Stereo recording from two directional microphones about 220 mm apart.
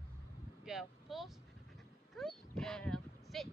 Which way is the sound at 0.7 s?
Centre (ahead or behind).